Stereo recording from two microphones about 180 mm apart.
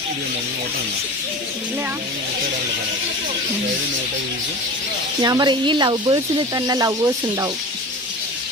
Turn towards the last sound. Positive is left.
turn(degrees=-20)  # may be behind; listen again after turning